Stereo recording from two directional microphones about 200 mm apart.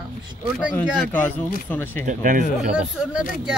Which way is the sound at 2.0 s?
40° right (ahead or behind).